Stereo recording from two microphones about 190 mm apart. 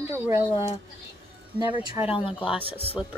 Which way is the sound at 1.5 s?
10° right (ahead or behind).